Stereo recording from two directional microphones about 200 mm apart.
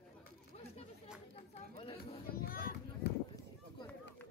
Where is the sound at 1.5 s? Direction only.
30° left (ahead or behind).